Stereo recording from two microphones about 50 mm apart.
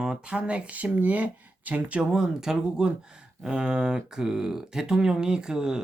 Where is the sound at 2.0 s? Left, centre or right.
Centre.